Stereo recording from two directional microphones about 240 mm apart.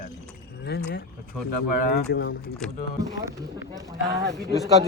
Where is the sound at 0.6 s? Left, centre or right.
Left.